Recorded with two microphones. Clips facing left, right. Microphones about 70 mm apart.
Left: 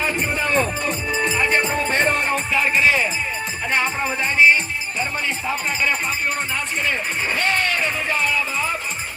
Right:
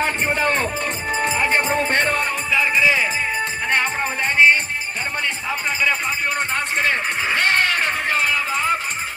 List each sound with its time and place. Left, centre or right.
0.0 s music: right
1.5 s music: right
3.7 s music: right
6.8 s music: right